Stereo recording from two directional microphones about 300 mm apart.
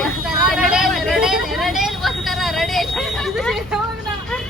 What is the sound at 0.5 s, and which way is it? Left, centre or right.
Vehicle, centre.